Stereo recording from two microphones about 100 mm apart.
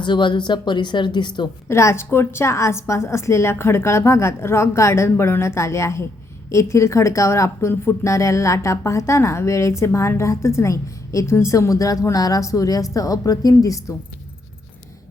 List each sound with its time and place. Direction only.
0.0 s speech: 50° left (ahead or behind)
1.6 s a woman's voice: 30° left (ahead or behind)